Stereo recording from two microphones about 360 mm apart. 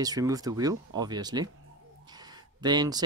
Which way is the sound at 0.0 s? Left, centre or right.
Centre.